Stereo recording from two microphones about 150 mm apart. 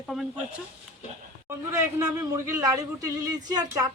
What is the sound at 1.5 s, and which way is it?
A man's voice, 20° right (ahead or behind).